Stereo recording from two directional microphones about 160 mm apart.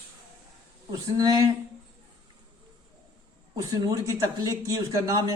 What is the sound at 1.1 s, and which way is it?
Speech, 20° right (ahead or behind).